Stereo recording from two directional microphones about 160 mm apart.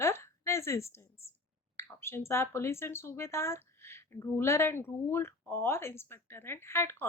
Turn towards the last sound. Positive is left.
turn(degrees=15)  # may be behind; listen again after turning